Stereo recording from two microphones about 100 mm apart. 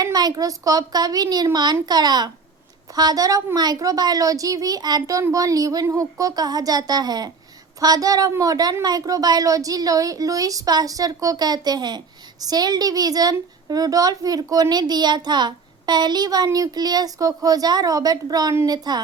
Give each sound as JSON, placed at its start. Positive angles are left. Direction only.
{"t": 0.0, "sound": "a child's voice", "side_deg": -40}